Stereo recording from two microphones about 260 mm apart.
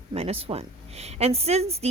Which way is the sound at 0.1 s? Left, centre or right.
Right.